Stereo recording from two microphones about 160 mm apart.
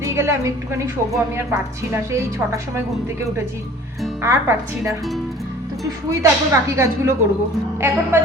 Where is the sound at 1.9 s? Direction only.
15° right (ahead or behind).